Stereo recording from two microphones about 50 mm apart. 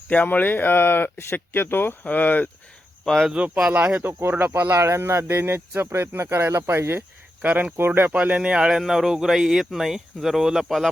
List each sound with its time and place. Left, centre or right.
0.1 s speech: left
2.0 s speech: left
3.4 s speech: centre
4.0 s speech: right
4.7 s speech: right
7.4 s speech: right
7.8 s speech: right
8.1 s speech: right
8.8 s speech: centre